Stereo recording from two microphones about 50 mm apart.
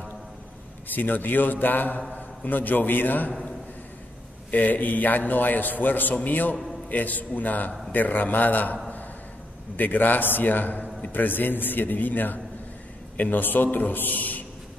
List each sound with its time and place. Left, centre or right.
0.9 s a man's voice: left
4.5 s a man's voice: left
6.5 s a man's voice: centre
6.9 s a man's voice: left
9.8 s a man's voice: left